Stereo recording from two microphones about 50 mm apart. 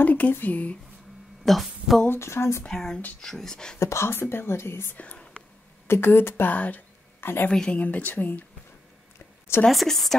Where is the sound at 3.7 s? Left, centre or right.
Left.